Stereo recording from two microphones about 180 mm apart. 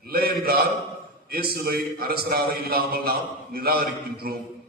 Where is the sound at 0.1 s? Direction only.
55° right (ahead or behind).